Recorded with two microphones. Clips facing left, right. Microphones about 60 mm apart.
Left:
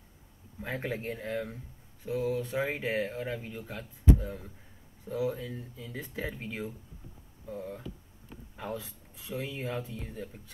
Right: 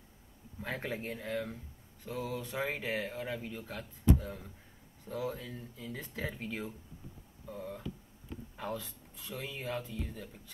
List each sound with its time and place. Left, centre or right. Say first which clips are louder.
0.6 s speech: left 3 dB; centre